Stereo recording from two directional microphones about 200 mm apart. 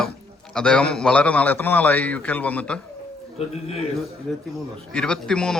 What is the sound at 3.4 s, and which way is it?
Speech, 30° left (ahead or behind).